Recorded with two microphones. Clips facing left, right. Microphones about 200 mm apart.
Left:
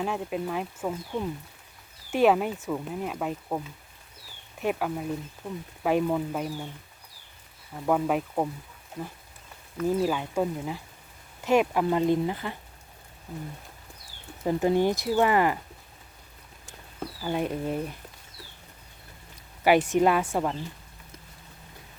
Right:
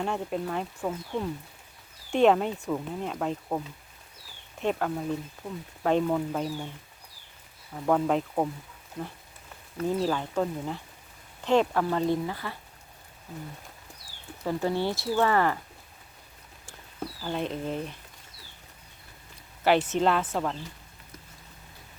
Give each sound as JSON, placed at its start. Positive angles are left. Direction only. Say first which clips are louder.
{"t": 0.0, "sound": "speech", "louder": "even", "side_deg": 5}
{"t": 4.6, "sound": "speech", "louder": "even", "side_deg": 10}
{"t": 5.4, "sound": "speech", "louder": "left 3 dB", "side_deg": -10}
{"t": 5.8, "sound": "speech", "louder": "even", "side_deg": 10}
{"t": 7.9, "sound": "speech", "louder": "even", "side_deg": 5}
{"t": 9.8, "sound": "speech", "louder": "left 2 dB", "side_deg": 10}
{"t": 14.4, "sound": "speech", "louder": "left 4 dB", "side_deg": 15}
{"t": 17.2, "sound": "speech", "louder": "left 3 dB", "side_deg": 10}
{"t": 19.6, "sound": "speech", "louder": "left 2 dB", "side_deg": 10}